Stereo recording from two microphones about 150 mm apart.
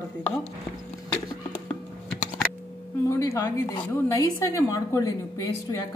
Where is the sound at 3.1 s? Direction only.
20° left (ahead or behind).